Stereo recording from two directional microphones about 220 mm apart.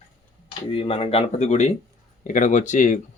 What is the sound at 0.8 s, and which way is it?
Speech, 25° left (ahead or behind).